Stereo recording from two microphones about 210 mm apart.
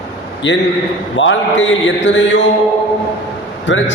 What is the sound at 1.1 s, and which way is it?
A man's voice, 65° left (ahead or behind).